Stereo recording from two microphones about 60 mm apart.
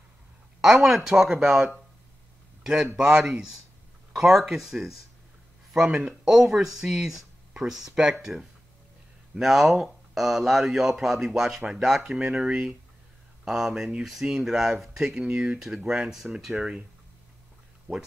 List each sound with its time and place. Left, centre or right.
0.6 s a man's voice: centre
17.9 s speech: right